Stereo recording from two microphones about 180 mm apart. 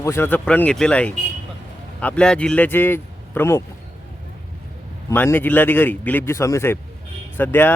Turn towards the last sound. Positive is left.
turn(degrees=10)  # may be behind; listen again after turning